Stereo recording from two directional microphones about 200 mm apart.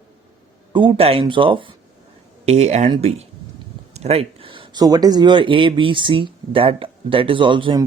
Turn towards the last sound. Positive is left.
turn(degrees=-25)  # may be behind; listen again after turning